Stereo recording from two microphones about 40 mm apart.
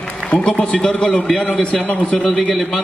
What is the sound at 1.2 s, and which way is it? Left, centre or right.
A man's voice, centre.